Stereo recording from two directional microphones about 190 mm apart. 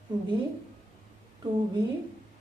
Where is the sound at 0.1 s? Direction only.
25° right (ahead or behind).